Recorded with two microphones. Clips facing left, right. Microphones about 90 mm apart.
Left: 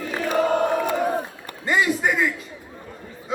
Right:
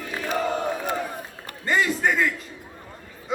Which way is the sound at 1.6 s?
10° left (ahead or behind).